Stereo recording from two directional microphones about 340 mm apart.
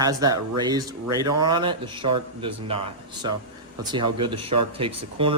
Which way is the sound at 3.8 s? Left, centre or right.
Centre.